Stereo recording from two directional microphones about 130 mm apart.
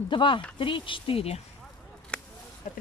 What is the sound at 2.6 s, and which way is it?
Speech, 75° left (ahead or behind).